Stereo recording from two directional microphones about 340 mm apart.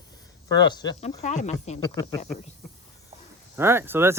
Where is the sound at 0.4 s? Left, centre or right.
Centre.